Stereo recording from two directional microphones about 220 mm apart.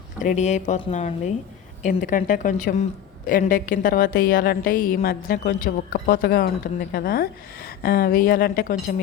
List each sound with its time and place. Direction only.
0.2 s a woman's voice: 35° left (ahead or behind)